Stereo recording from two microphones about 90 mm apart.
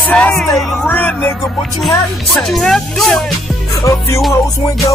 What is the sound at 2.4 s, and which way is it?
Speech, 5° left (ahead or behind).